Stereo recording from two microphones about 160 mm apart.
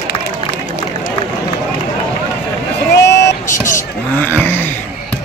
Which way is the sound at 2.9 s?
90° left.